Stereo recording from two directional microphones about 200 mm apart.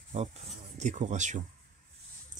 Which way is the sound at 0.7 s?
40° right (ahead or behind).